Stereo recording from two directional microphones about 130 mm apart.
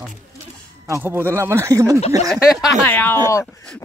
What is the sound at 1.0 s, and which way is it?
Speech, 15° right (ahead or behind).